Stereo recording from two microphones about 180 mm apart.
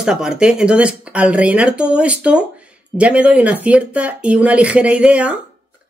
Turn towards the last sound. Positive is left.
turn(degrees=-5)  # may be behind; listen again after turning